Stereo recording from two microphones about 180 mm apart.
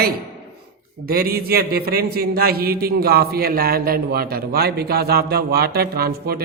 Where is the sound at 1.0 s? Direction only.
55° right (ahead or behind).